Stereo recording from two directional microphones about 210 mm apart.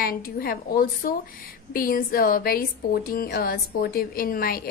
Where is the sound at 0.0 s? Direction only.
45° left (ahead or behind).